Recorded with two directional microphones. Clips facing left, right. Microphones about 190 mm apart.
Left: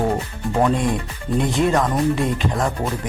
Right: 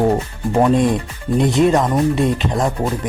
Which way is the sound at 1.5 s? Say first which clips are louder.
Right 4 dB; 20° right (ahead or behind).